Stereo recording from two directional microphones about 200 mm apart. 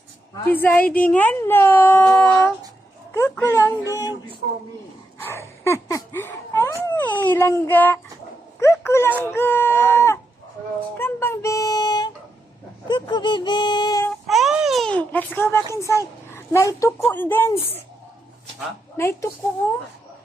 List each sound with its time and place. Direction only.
0.5 s speech: 10° left (ahead or behind)
5.6 s speech: 15° left (ahead or behind)
12.9 s a sound: 20° left (ahead or behind)
14.3 s baby cry: centre (ahead or behind)
15.7 s a child's voice: 15° left (ahead or behind)
18.9 s speech: 15° left (ahead or behind)